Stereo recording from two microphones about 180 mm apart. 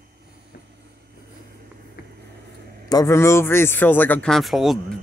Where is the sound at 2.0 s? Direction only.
60° left (ahead or behind).